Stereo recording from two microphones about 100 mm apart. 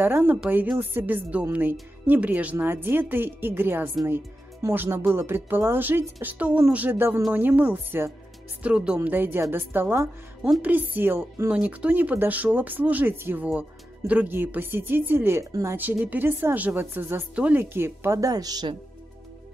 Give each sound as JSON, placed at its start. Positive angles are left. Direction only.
{"t": 0.0, "sound": "speech", "side_deg": -20}